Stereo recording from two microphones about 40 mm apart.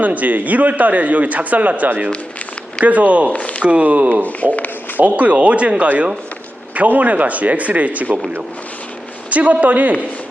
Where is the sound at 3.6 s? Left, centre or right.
Right.